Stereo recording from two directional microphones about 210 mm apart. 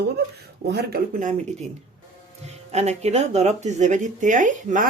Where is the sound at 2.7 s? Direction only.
30° right (ahead or behind).